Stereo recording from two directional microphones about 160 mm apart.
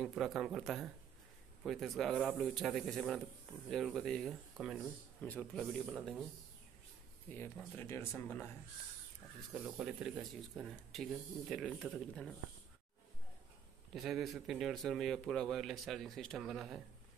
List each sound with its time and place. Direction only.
0.0 s speech: centre (ahead or behind)
7.2 s speech: 15° left (ahead or behind)
9.5 s speech: 5° right (ahead or behind)
13.9 s speech: centre (ahead or behind)